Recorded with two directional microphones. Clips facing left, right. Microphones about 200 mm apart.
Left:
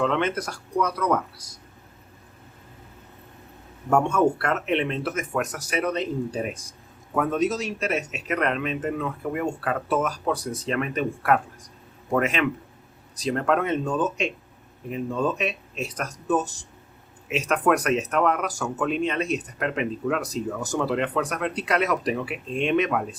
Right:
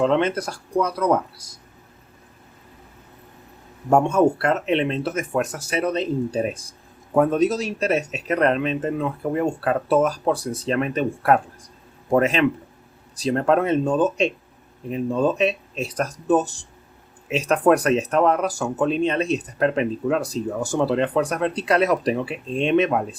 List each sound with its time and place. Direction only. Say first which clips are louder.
0.0 s speech: right 4 dB; 30° right (ahead or behind)
3.8 s speech: right 4 dB; 25° right (ahead or behind)